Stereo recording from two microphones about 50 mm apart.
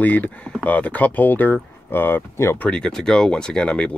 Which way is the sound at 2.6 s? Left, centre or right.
Centre.